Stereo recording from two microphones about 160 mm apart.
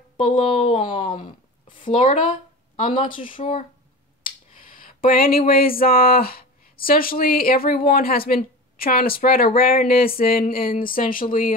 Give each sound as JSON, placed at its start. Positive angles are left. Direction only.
{"t": 0.2, "sound": "speech", "side_deg": 55}
{"t": 0.5, "sound": "a woman's voice", "side_deg": 45}
{"t": 4.2, "sound": "a sound", "side_deg": 60}